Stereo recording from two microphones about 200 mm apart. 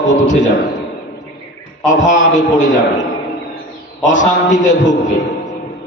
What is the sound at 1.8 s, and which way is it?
A man's voice, 40° left (ahead or behind).